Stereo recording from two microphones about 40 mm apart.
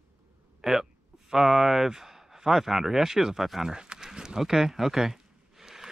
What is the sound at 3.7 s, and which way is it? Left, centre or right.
Speech, centre.